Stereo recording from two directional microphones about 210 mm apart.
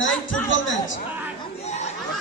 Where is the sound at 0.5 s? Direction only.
65° left (ahead or behind).